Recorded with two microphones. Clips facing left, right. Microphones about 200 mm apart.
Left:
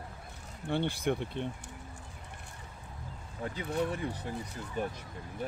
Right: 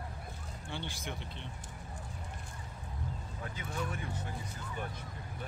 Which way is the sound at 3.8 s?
35° left (ahead or behind).